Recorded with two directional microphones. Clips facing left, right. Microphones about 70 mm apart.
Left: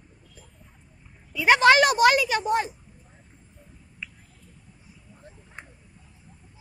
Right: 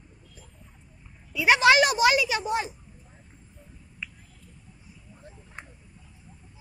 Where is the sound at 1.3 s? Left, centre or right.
Left.